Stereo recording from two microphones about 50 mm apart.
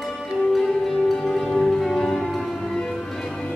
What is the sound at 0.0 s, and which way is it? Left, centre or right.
Music, centre.